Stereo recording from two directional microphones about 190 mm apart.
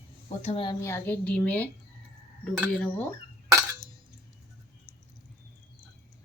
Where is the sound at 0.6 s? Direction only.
15° left (ahead or behind).